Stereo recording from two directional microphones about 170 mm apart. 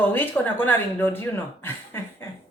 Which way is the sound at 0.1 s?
10° left (ahead or behind).